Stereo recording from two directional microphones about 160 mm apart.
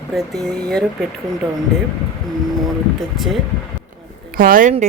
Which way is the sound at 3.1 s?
Centre (ahead or behind).